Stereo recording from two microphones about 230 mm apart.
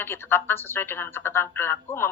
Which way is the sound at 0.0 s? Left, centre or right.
Centre.